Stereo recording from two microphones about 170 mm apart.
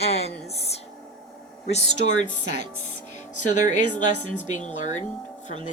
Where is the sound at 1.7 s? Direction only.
45° left (ahead or behind).